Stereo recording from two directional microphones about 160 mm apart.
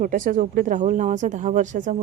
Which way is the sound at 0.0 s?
55° right (ahead or behind).